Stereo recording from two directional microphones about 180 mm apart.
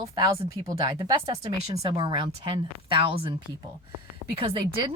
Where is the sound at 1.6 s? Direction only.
35° right (ahead or behind).